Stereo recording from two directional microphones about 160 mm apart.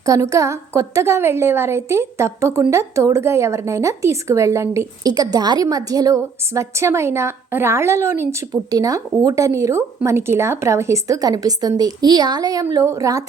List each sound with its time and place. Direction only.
0.0 s a woman's voice: 20° right (ahead or behind)